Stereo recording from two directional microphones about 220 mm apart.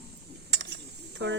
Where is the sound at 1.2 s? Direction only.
55° right (ahead or behind).